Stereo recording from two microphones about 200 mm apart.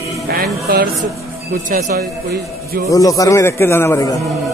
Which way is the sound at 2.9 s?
15° left (ahead or behind).